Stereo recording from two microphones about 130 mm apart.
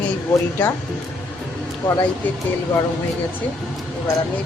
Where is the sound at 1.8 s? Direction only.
20° left (ahead or behind).